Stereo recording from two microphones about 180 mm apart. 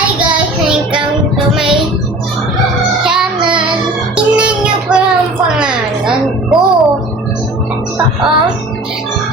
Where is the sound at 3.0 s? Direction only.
5° right (ahead or behind).